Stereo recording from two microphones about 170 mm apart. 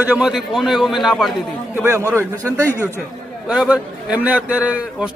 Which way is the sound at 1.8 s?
15° right (ahead or behind).